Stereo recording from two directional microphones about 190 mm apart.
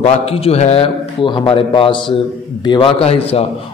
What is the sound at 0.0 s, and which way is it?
A man's voice, 30° left (ahead or behind).